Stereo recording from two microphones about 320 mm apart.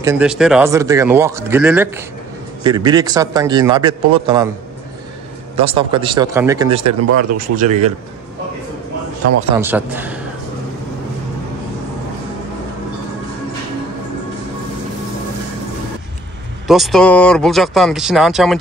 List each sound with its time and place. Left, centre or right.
0.0 s speech: centre
5.6 s speech: centre
6.9 s speech: right
7.3 s speech: right
9.6 s speech: centre
16.6 s speech: centre